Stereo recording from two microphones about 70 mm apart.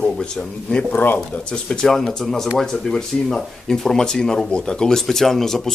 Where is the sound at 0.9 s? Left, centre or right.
Left.